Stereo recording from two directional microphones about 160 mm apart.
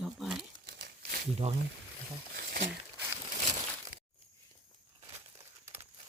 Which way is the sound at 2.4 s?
90° right.